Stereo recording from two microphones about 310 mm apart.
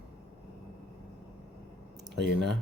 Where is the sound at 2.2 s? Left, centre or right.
Right.